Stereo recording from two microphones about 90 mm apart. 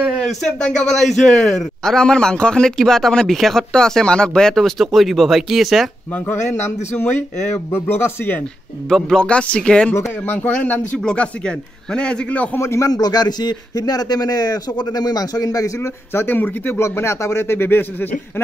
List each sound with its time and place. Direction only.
0.3 s a man's voice: 5° left (ahead or behind)
6.1 s speech: 25° left (ahead or behind)
8.8 s a man's voice: 5° left (ahead or behind)
9.9 s speech: 30° left (ahead or behind)
11.0 s a man's voice: 10° left (ahead or behind)
12.5 s a man's voice: 30° left (ahead or behind)
12.9 s a man's voice: 50° left (ahead or behind); by 18.4 s 20° left (ahead or behind)